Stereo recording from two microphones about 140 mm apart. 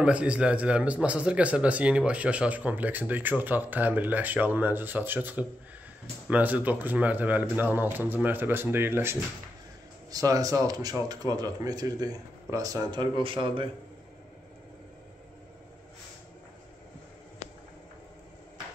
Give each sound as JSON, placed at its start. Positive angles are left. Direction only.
{"t": 0.0, "sound": "a man's voice", "side_deg": -10}